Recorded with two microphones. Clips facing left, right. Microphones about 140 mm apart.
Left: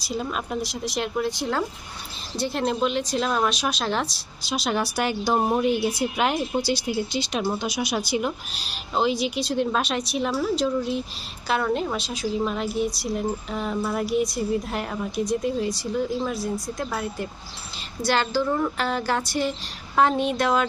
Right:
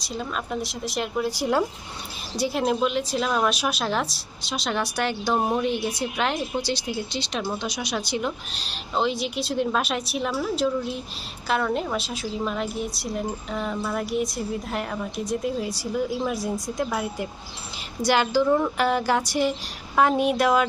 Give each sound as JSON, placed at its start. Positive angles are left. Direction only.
{"t": 0.0, "sound": "a woman's voice", "side_deg": 5}